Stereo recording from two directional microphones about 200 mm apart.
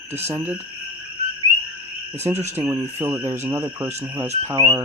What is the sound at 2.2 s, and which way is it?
Speech, 10° right (ahead or behind).